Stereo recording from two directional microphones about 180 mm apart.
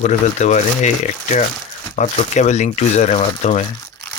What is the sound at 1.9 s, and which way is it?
Speech, 40° left (ahead or behind).